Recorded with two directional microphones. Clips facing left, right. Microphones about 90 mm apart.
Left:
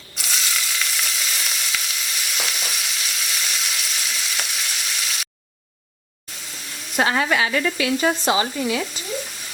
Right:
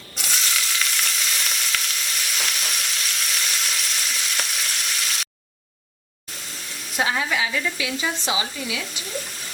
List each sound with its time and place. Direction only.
0.2 s frying: centre (ahead or behind)
6.9 s frying: 60° left (ahead or behind)
8.2 s speech: 50° left (ahead or behind)